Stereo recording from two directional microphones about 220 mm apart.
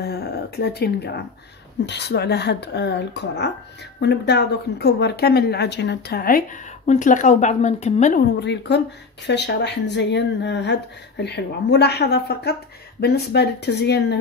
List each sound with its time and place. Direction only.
0.0 s a woman's voice: 45° left (ahead or behind); by 8.2 s 30° left (ahead or behind)
8.4 s a woman's voice: 50° left (ahead or behind)